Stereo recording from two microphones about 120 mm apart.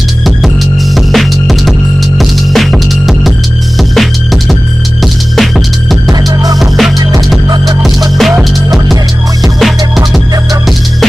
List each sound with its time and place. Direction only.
0.9 s music: centre (ahead or behind)
6.2 s music: 30° right (ahead or behind)
6.6 s music: centre (ahead or behind)
7.4 s music: 35° right (ahead or behind)
8.2 s music: 5° right (ahead or behind)